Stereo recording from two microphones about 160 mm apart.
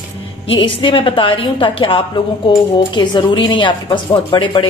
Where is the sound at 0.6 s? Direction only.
30° left (ahead or behind).